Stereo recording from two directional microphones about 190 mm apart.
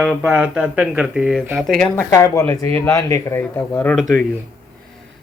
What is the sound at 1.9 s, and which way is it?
Speech, 15° left (ahead or behind).